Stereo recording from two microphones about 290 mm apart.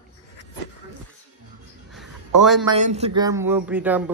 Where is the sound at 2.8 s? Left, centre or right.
Right; by 4.0 s centre.